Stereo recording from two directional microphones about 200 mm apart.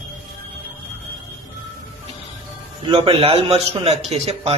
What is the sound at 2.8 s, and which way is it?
A man's voice, 25° right (ahead or behind).